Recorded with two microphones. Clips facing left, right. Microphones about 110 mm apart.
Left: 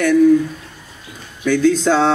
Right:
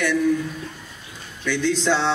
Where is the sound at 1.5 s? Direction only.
45° left (ahead or behind).